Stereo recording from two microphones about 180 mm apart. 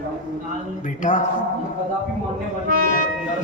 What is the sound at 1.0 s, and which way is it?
Speech, 45° left (ahead or behind).